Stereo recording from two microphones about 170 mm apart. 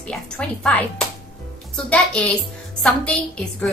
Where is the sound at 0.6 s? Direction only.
5° left (ahead or behind).